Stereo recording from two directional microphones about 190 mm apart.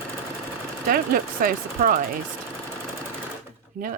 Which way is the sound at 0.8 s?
50° right (ahead or behind).